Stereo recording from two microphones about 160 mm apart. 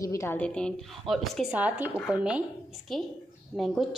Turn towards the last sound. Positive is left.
turn(degrees=0)  # may be behind; listen again after turning